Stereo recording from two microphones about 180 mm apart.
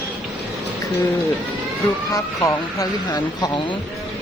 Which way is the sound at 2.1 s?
20° left (ahead or behind).